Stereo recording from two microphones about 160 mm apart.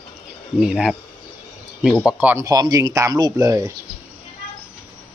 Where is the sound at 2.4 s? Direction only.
25° right (ahead or behind).